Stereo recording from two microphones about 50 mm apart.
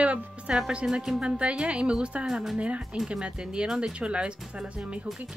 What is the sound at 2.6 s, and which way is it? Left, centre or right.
Speech, right.